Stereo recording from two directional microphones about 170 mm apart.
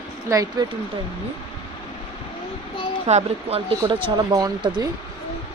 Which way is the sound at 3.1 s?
40° right (ahead or behind).